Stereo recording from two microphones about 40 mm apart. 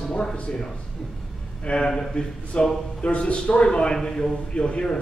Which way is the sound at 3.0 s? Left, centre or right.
Left.